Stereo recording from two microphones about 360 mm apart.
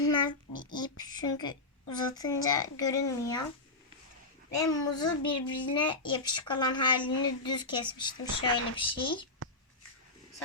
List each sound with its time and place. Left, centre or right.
0.0 s child singing: centre
0.8 s a child's voice: centre
4.5 s a child's voice: centre